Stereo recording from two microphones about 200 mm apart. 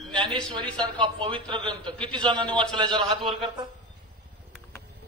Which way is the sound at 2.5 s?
5° left (ahead or behind).